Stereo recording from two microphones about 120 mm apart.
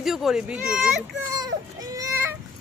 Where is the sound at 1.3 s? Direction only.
30° right (ahead or behind).